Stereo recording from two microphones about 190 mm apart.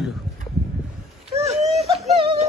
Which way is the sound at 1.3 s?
35° right (ahead or behind).